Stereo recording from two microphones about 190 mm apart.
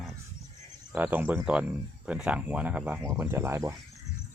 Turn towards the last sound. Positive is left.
turn(degrees=-15)  # may be behind; listen again after turning